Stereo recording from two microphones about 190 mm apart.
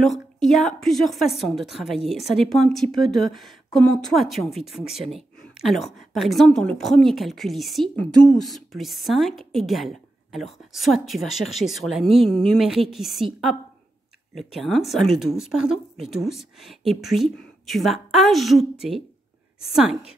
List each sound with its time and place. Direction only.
0.0 s a woman's voice: centre (ahead or behind)